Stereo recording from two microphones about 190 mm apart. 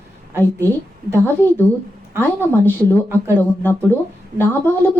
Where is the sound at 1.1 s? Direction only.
10° left (ahead or behind).